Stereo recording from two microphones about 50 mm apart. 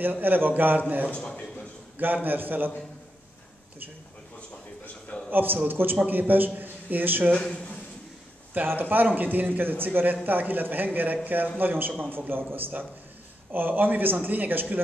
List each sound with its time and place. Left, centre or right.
0.0 s a man's voice: right
1.1 s a man's voice: left
2.2 s a man's voice: right
5.3 s a man's voice: right
7.3 s a woman's voice: left
8.5 s a man's voice: right